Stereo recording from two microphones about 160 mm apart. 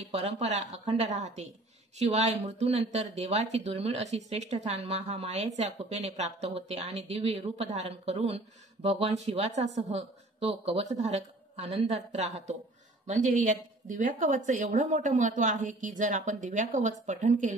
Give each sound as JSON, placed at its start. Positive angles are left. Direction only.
{"t": 0.0, "sound": "speech", "side_deg": -45}